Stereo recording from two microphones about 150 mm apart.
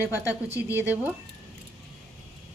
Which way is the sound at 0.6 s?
15° right (ahead or behind).